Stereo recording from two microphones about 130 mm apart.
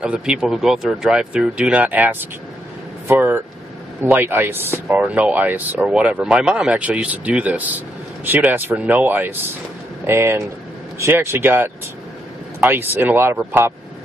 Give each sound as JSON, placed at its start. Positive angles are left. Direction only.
{"t": 0.0, "sound": "speech", "side_deg": -5}